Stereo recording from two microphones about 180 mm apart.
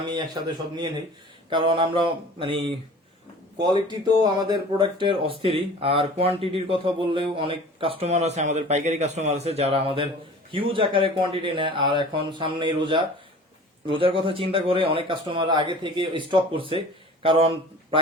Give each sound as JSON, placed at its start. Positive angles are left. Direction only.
{"t": 0.1, "sound": "speech", "side_deg": -25}
{"t": 3.7, "sound": "speech", "side_deg": -20}